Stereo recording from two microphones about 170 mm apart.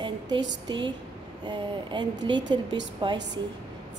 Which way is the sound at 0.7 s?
25° right (ahead or behind).